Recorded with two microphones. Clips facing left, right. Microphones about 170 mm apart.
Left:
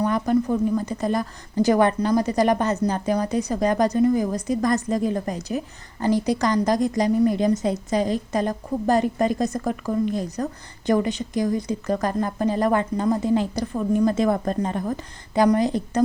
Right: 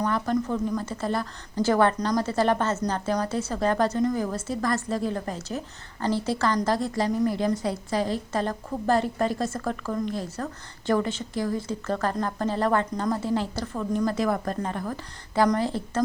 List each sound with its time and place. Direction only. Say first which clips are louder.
0.0 s a woman's voice: left 5 dB; 15° left (ahead or behind)